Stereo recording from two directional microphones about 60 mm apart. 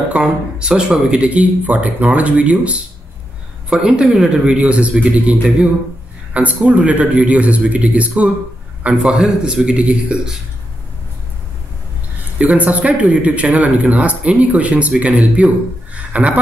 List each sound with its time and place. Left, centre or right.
0.1 s speech: centre
3.8 s speech: centre
4.6 s speech: right
8.8 s speech: centre
12.4 s speech: right